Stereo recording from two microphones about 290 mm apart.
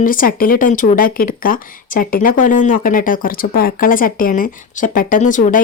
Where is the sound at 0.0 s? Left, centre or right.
Left.